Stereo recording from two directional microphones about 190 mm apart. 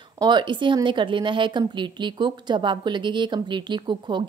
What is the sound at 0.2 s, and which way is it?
A woman's voice, 25° right (ahead or behind).